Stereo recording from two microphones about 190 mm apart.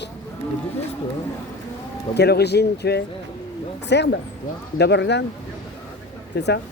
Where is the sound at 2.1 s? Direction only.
60° left (ahead or behind).